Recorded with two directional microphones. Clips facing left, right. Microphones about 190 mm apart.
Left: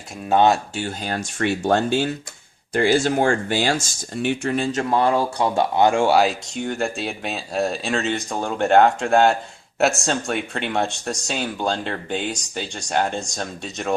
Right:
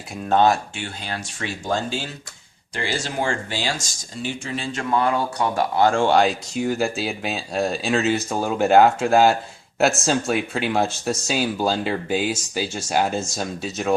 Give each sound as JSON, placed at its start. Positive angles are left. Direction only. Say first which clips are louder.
{"t": 0.8, "sound": "speech", "louder": "left 5 dB", "side_deg": 45}